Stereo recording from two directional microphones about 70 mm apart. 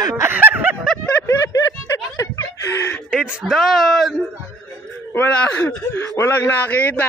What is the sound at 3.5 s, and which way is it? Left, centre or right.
Speech, centre.